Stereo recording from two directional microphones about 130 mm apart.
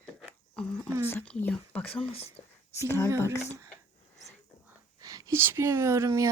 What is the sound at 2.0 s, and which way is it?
Speech, 55° left (ahead or behind).